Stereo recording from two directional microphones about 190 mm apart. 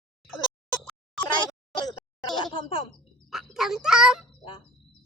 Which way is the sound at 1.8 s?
25° left (ahead or behind).